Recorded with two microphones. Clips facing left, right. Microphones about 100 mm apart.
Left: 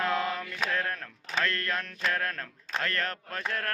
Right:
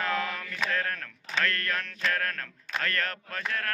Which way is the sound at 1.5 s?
25° left (ahead or behind).